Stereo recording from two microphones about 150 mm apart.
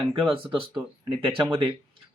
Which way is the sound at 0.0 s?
35° right (ahead or behind).